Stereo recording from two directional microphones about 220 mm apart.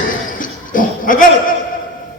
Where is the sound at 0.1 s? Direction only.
40° left (ahead or behind).